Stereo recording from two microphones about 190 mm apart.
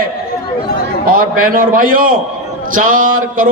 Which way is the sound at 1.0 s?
50° right (ahead or behind).